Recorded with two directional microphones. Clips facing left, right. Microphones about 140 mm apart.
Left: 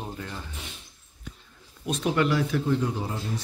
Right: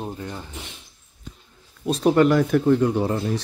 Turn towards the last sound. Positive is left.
turn(degrees=-75)  # may be behind; listen again after turning